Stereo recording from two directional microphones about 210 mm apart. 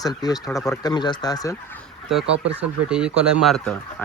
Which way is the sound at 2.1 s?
Centre (ahead or behind).